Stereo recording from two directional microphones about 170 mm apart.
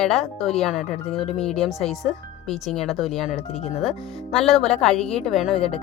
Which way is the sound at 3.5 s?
40° left (ahead or behind).